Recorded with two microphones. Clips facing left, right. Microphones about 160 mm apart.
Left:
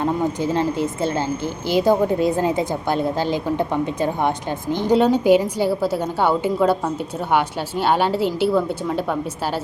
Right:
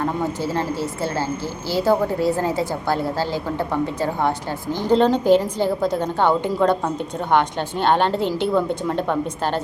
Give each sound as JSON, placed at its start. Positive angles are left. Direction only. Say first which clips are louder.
{"t": 0.0, "sound": "a woman's voice", "louder": "left 2 dB", "side_deg": 20}